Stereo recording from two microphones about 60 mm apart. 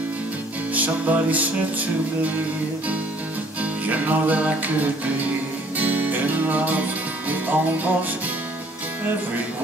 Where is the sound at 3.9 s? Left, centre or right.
Right.